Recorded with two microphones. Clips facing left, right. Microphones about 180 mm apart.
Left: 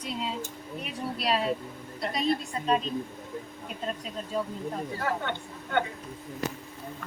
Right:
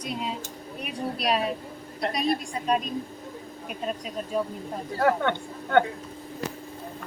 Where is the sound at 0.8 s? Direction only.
15° right (ahead or behind).